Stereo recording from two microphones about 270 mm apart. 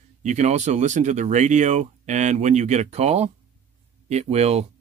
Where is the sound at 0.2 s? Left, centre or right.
Right.